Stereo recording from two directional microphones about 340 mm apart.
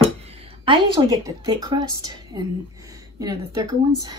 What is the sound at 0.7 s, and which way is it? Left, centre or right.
Speech, centre.